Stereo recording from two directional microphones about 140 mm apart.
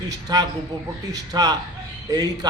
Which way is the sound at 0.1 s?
25° right (ahead or behind).